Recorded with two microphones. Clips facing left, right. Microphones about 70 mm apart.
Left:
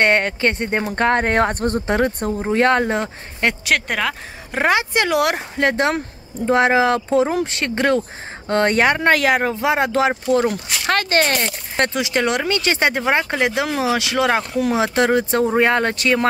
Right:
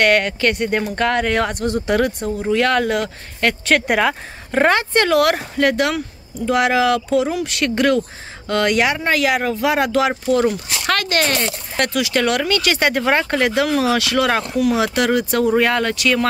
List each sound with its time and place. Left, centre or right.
0.0 s speech: left
3.6 s speech: centre
4.5 s speech: centre; by 16.3 s left